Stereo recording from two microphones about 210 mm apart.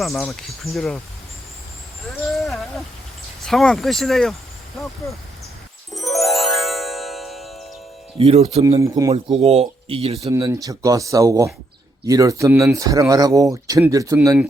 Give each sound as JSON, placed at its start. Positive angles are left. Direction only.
{"t": 0.0, "sound": "speech", "side_deg": 0}
{"t": 2.0, "sound": "a sound", "side_deg": 0}
{"t": 3.4, "sound": "speech", "side_deg": 0}
{"t": 5.9, "sound": "music", "side_deg": 0}
{"t": 8.2, "sound": "speech", "side_deg": -30}
{"t": 8.8, "sound": "speech", "side_deg": -15}
{"t": 9.1, "sound": "speech", "side_deg": -30}
{"t": 10.2, "sound": "speech", "side_deg": -15}